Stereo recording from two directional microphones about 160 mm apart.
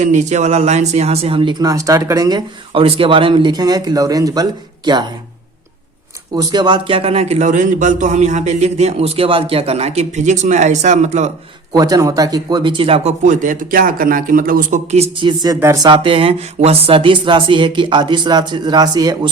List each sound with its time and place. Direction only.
0.0 s a sound: 45° right (ahead or behind); by 2.4 s 25° right (ahead or behind)
2.7 s speech: 35° right (ahead or behind)
6.3 s a man's voice: 25° right (ahead or behind); by 11.3 s 45° right (ahead or behind)
11.7 s speech: 25° right (ahead or behind)
13.2 s a man's voice: 55° right (ahead or behind)
14.8 s a sound: 40° right (ahead or behind); by 19.3 s 25° right (ahead or behind)